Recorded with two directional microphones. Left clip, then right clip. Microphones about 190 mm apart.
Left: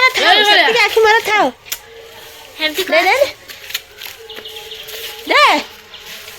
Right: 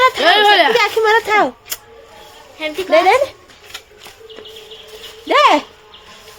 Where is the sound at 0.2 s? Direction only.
65° right (ahead or behind).